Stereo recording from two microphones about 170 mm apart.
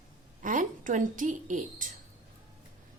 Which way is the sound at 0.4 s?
50° right (ahead or behind).